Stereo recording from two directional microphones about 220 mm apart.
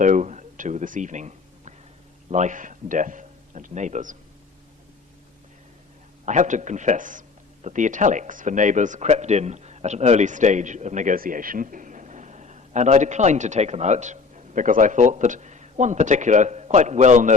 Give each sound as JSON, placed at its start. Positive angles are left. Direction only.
{"t": 0.0, "sound": "a sound", "side_deg": -35}
{"t": 2.3, "sound": "a man's voice", "side_deg": -35}
{"t": 6.2, "sound": "speech", "side_deg": -35}